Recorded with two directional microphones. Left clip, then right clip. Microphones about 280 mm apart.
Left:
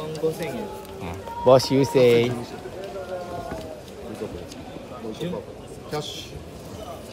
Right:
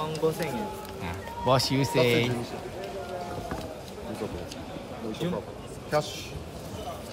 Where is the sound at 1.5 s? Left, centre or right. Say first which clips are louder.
Left 8 dB; centre.